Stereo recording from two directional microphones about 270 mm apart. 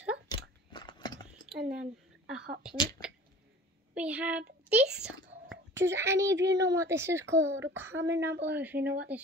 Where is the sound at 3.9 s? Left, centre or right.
Centre.